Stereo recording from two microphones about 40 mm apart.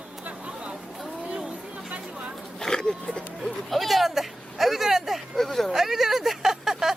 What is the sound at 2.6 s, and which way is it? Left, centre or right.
Speech, centre.